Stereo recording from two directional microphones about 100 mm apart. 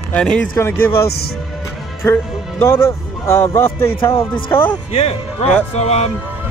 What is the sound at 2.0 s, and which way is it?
Speech, 25° left (ahead or behind).